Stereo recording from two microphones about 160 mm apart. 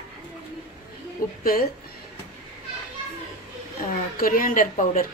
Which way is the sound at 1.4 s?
65° left (ahead or behind).